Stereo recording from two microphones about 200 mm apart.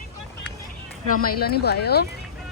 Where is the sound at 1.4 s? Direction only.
55° left (ahead or behind).